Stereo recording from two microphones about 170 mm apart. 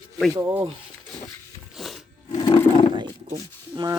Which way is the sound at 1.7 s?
Centre (ahead or behind).